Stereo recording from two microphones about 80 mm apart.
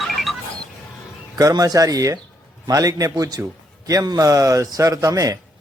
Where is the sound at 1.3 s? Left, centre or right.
Right.